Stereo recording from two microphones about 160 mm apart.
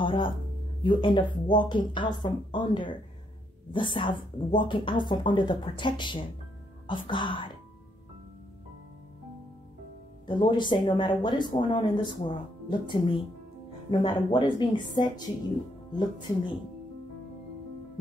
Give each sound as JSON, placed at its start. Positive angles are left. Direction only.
{"t": 0.0, "sound": "a sound", "side_deg": 30}
{"t": 0.8, "sound": "speech", "side_deg": 30}
{"t": 10.2, "sound": "speech", "side_deg": 30}